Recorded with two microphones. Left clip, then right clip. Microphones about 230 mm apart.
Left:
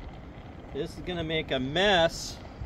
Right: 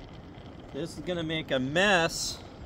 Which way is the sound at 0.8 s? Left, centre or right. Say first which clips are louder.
Even; right.